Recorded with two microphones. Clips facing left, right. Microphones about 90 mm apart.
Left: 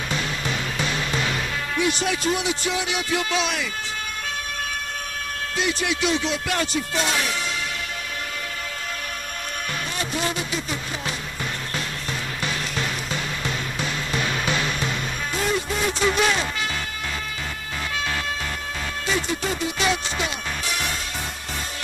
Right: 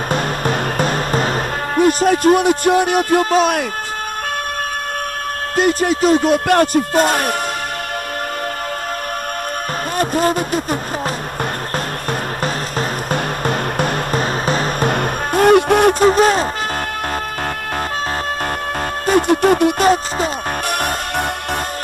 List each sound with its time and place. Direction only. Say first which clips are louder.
0.1 s music: right 9 dB; 50° right (ahead or behind)
5.6 s music: right 10 dB; 45° right (ahead or behind)
9.9 s music: right 12 dB; 45° right (ahead or behind)
12.1 s music: right 8 dB; 45° right (ahead or behind)
19.0 s music: right 13 dB; 55° right (ahead or behind)